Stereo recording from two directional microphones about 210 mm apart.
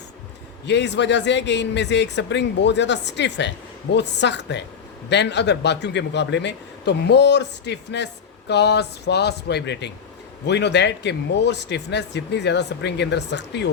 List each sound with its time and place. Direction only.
0.6 s a man's voice: 55° left (ahead or behind)